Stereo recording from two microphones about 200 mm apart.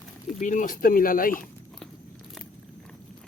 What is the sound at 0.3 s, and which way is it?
Speech, 40° left (ahead or behind).